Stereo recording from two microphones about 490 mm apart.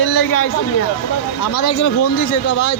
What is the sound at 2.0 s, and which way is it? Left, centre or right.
Speech, left.